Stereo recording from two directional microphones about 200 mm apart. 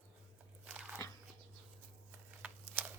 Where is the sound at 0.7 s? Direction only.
10° right (ahead or behind).